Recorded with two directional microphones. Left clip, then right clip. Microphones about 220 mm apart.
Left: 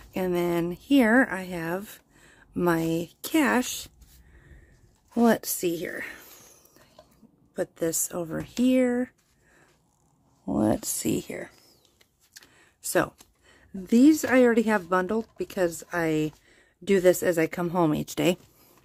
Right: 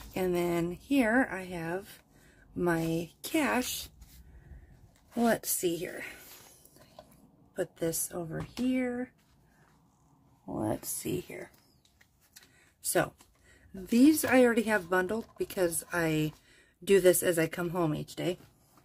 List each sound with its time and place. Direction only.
0.1 s speech: 30° left (ahead or behind)
5.1 s a woman's voice: 35° left (ahead or behind)
7.5 s speech: 35° left (ahead or behind); by 9.1 s 55° left (ahead or behind)
10.4 s speech: 55° left (ahead or behind)
12.5 s a sound: 35° left (ahead or behind)
13.5 s speech: 30° left (ahead or behind); by 18.4 s 50° left (ahead or behind)